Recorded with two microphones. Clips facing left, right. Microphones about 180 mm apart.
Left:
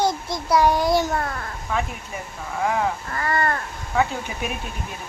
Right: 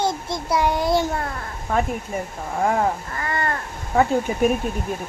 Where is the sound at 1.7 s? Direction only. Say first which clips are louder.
Right 5 dB; 45° right (ahead or behind).